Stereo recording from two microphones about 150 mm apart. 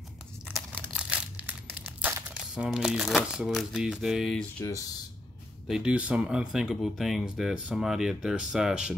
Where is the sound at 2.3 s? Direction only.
5° right (ahead or behind).